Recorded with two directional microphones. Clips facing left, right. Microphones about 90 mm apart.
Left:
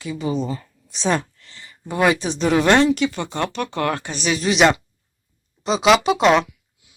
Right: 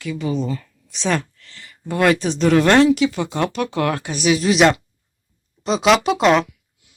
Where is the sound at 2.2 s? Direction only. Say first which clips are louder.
Right 3 dB; 5° left (ahead or behind).